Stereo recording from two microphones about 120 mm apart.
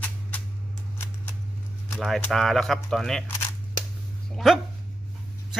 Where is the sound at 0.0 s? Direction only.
15° left (ahead or behind).